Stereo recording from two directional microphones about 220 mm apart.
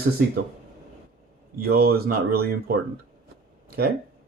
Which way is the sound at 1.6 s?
45° right (ahead or behind).